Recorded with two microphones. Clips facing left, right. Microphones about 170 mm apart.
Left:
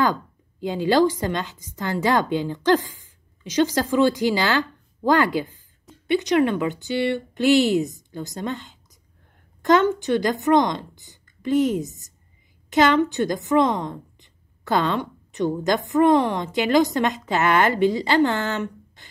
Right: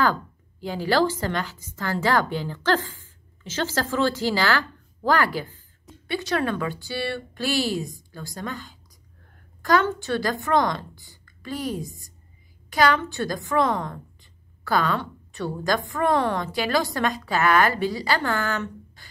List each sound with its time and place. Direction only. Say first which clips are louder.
0.0 s a woman's voice: left 1 dB; 20° left (ahead or behind)